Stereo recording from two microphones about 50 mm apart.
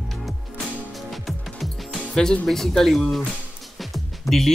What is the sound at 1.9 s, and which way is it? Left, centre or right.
Music, centre.